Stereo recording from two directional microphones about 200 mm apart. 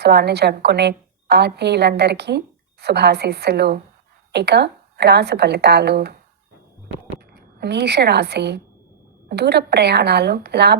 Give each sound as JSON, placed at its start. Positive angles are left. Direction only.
{"t": 0.0, "sound": "a woman's voice", "side_deg": -55}
{"t": 7.6, "sound": "a woman's voice", "side_deg": -55}